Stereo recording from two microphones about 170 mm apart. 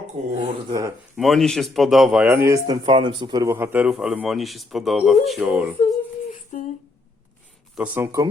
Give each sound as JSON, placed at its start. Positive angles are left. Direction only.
{"t": 0.2, "sound": "speech", "side_deg": -45}
{"t": 0.7, "sound": "speech", "side_deg": -20}
{"t": 1.1, "sound": "a man's voice", "side_deg": 0}
{"t": 6.5, "sound": "a sound", "side_deg": 50}
{"t": 7.8, "sound": "speech", "side_deg": -15}